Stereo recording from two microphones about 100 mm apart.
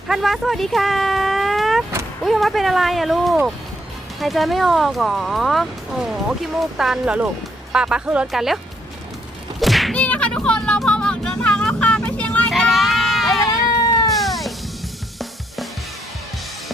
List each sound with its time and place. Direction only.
0.1 s speech: centre (ahead or behind)
9.6 s a sound: centre (ahead or behind)
9.9 s vehicle: 15° left (ahead or behind)
12.5 s a sound: centre (ahead or behind)
13.5 s cat: 40° left (ahead or behind)
14.1 s cat: centre (ahead or behind)